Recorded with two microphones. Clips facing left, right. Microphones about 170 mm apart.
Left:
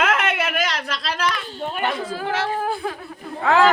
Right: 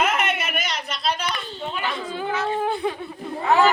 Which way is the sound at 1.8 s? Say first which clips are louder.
Left 4 dB; 80° left.